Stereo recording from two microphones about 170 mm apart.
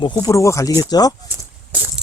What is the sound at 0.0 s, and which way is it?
Speech, 25° left (ahead or behind).